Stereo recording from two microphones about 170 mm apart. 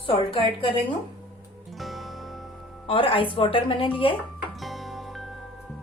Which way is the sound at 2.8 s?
30° left (ahead or behind).